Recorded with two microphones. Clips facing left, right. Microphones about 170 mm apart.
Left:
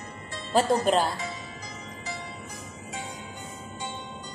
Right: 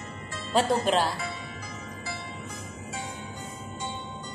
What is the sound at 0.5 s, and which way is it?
Speech, centre (ahead or behind).